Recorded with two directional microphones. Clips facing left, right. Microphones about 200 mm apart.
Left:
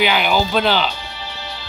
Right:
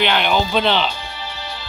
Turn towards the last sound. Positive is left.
turn(degrees=0)  # may be behind; listen again after turning